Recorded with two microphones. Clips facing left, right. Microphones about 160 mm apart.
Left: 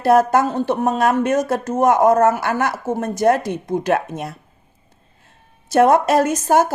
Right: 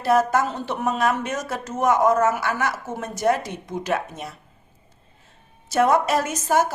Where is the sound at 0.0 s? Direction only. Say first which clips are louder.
Left 5 dB; 55° left (ahead or behind).